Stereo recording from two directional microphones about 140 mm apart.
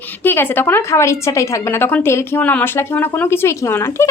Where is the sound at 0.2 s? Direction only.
15° left (ahead or behind).